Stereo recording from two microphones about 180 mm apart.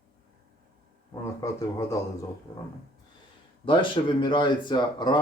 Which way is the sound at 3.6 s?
30° left (ahead or behind).